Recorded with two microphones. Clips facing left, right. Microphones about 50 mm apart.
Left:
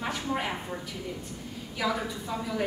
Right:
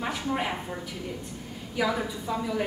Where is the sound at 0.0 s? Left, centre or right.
Centre.